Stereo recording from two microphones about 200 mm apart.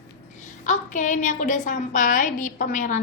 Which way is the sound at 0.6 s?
40° left (ahead or behind).